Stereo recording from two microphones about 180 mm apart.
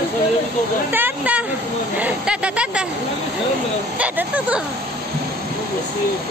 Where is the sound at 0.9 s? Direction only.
10° right (ahead or behind).